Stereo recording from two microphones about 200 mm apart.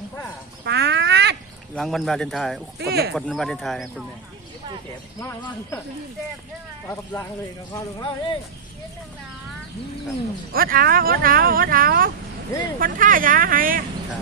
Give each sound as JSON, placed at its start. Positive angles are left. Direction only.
{"t": 0.7, "sound": "a sound", "side_deg": -60}
{"t": 1.8, "sound": "speech", "side_deg": 0}
{"t": 2.8, "sound": "speech", "side_deg": -55}
{"t": 3.2, "sound": "speech", "side_deg": 0}
{"t": 7.7, "sound": "speech", "side_deg": 20}
{"t": 10.5, "sound": "speech", "side_deg": -45}